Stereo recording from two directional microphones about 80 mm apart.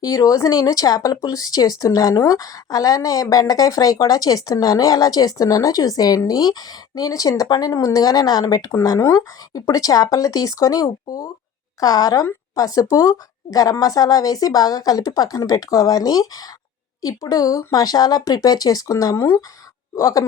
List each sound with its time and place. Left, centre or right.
0.0 s speech: left